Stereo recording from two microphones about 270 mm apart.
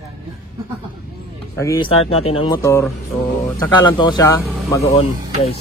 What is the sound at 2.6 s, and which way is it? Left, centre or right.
Speech, centre.